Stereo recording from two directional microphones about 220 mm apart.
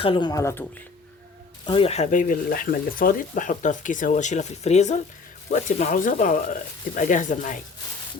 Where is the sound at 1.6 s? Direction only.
25° left (ahead or behind).